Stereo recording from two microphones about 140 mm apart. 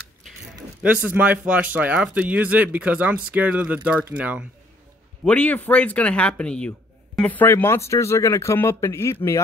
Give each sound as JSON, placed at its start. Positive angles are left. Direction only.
{"t": 1.0, "sound": "speech", "side_deg": -10}
{"t": 5.2, "sound": "speech", "side_deg": 10}